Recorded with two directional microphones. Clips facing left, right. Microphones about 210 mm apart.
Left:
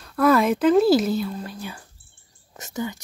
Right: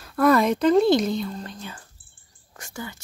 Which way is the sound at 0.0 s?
Centre (ahead or behind).